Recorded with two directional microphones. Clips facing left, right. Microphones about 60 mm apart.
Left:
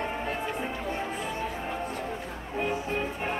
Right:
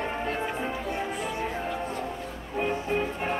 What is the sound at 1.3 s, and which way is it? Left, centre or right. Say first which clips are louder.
Music: right 2 dB; right.